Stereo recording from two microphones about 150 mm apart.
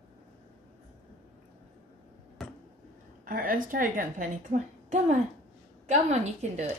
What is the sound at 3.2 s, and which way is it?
A woman's voice, 70° right (ahead or behind).